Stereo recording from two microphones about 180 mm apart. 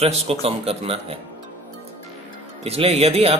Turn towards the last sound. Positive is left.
turn(degrees=-35)  # may be behind; listen again after turning